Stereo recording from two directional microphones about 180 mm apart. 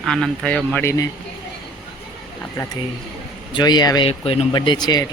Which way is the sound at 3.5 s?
25° left (ahead or behind).